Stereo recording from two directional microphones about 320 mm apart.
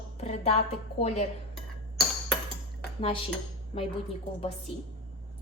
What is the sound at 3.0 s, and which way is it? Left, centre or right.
Cutlery, centre.